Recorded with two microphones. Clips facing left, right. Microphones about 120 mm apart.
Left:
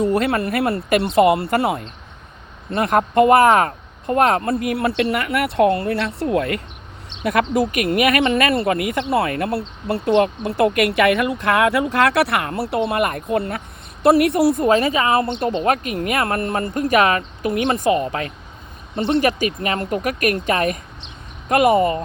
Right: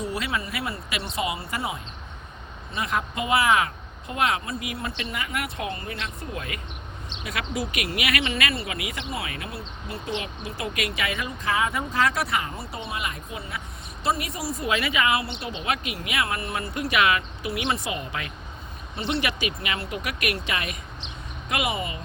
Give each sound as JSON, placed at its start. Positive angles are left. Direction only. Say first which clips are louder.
{"t": 0.0, "sound": "speech", "louder": "left 11 dB", "side_deg": 55}
{"t": 7.3, "sound": "speech", "louder": "left 12 dB", "side_deg": 50}
{"t": 14.7, "sound": "a woman's voice", "louder": "left 8 dB", "side_deg": 40}